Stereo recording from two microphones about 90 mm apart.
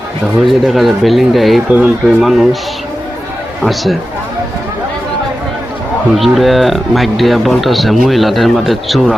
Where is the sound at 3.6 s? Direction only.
Centre (ahead or behind).